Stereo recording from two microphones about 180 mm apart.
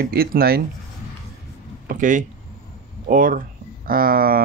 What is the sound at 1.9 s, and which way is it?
Speech, 45° right (ahead or behind).